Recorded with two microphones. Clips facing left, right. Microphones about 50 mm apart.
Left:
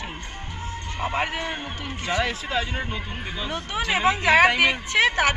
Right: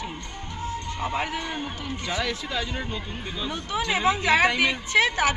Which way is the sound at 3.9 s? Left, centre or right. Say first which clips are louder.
Left 2 dB; left.